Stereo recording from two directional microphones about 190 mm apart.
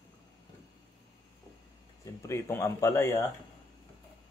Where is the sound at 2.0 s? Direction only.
15° left (ahead or behind).